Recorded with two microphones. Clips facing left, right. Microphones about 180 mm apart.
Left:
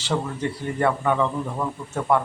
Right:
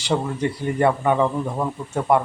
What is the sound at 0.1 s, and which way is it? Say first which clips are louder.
Speech: right 3 dB; 20° right (ahead or behind).